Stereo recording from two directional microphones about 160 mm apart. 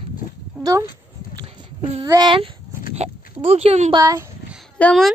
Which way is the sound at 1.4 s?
35° right (ahead or behind).